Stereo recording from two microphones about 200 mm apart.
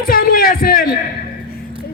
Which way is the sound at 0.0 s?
45° left (ahead or behind).